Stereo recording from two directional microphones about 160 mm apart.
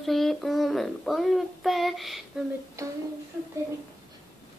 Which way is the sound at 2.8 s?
20° right (ahead or behind).